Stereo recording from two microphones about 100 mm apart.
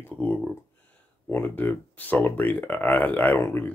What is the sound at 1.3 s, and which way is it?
Speech, 20° left (ahead or behind).